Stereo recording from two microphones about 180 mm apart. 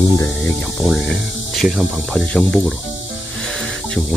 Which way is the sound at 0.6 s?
5° left (ahead or behind).